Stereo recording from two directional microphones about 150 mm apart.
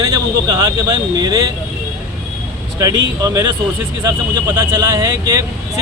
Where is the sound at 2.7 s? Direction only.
25° right (ahead or behind).